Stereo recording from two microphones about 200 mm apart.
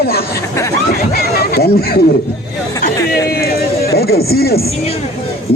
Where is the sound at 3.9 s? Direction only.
50° left (ahead or behind).